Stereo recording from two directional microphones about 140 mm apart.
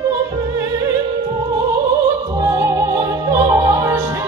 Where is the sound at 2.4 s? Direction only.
20° right (ahead or behind).